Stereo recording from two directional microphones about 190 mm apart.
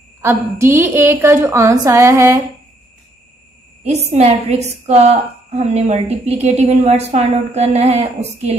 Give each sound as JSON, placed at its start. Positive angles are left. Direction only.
{"t": 0.2, "sound": "a woman's voice", "side_deg": -15}
{"t": 3.8, "sound": "a woman's voice", "side_deg": -35}